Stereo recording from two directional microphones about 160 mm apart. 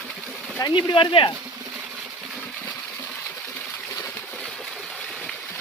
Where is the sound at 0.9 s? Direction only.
30° left (ahead or behind).